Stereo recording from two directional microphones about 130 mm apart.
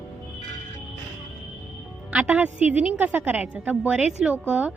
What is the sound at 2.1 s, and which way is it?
A woman's voice, 10° right (ahead or behind).